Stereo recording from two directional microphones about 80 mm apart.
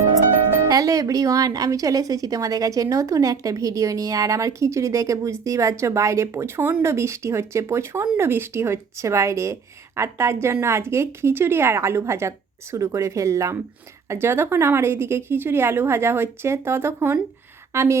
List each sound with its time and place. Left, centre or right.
0.7 s a woman's voice: right